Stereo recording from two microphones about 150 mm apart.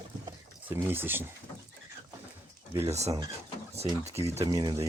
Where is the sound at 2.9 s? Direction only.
45° right (ahead or behind).